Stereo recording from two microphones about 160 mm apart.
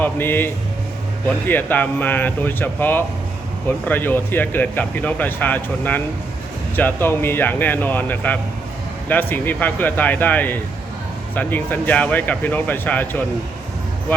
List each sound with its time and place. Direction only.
0.0 s speech: 15° left (ahead or behind)